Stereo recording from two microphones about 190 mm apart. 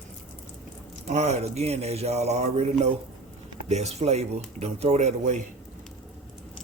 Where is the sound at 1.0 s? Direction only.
35° right (ahead or behind).